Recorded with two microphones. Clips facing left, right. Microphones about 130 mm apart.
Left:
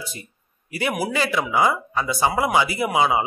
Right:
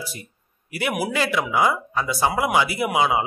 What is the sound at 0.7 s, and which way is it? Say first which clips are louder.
A man's voice: even; 5° right (ahead or behind).